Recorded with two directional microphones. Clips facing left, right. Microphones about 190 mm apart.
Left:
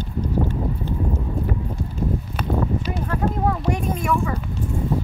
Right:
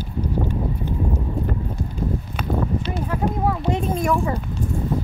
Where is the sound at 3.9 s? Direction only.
40° right (ahead or behind).